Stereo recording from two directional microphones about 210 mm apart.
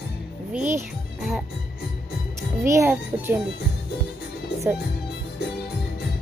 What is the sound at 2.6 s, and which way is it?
Speech, 15° right (ahead or behind).